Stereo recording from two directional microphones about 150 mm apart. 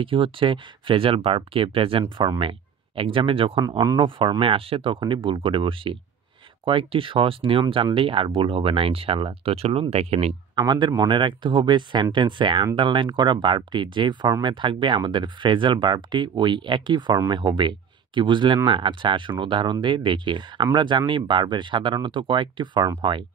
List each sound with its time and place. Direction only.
0.0 s speech: 35° right (ahead or behind)
3.6 s speech: 20° right (ahead or behind)
4.0 s speech: 35° right (ahead or behind)
10.5 s speech: 30° right (ahead or behind)